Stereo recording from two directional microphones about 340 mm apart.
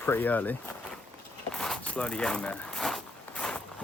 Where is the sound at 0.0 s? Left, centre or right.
Centre.